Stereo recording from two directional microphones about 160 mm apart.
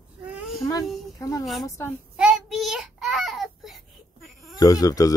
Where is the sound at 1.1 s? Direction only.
20° left (ahead or behind).